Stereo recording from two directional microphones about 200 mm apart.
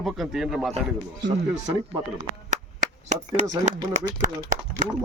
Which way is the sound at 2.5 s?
35° right (ahead or behind).